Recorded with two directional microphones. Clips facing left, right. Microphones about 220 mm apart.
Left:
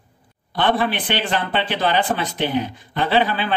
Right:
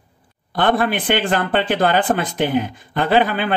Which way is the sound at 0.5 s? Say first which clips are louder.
Right 2 dB; 50° right (ahead or behind).